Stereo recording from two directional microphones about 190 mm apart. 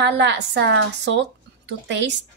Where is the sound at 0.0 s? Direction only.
70° right (ahead or behind).